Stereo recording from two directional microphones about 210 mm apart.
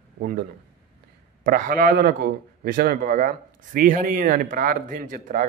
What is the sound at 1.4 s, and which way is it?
A man's voice, 40° right (ahead or behind).